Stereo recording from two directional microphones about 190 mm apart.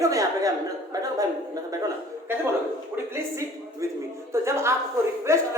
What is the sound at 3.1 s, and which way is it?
A woman's voice, 15° right (ahead or behind).